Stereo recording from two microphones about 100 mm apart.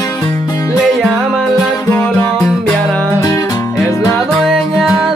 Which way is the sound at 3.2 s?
35° left (ahead or behind).